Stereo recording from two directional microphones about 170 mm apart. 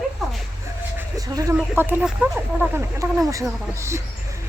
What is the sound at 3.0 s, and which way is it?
Speech, 20° right (ahead or behind).